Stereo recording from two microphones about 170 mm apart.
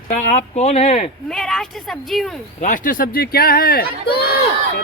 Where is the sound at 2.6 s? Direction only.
50° left (ahead or behind).